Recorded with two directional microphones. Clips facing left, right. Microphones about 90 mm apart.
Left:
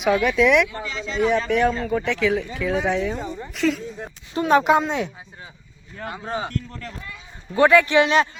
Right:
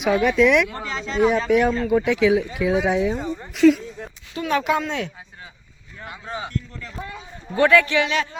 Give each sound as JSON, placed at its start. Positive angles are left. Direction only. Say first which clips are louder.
{"t": 0.0, "sound": "speech", "louder": "right 1 dB", "side_deg": 0}
{"t": 0.9, "sound": "speech", "louder": "right 1 dB", "side_deg": -50}
{"t": 1.1, "sound": "a woman's voice", "louder": "right 2 dB", "side_deg": -5}
{"t": 4.4, "sound": "speech", "louder": "left 5 dB", "side_deg": 30}
{"t": 6.1, "sound": "speech", "louder": "left 3 dB", "side_deg": 35}
{"t": 6.5, "sound": "a man's voice", "louder": "left 1 dB", "side_deg": 50}
{"t": 7.5, "sound": "speech", "louder": "left 1 dB", "side_deg": 20}
{"t": 7.9, "sound": "speech", "louder": "left 4 dB", "side_deg": 35}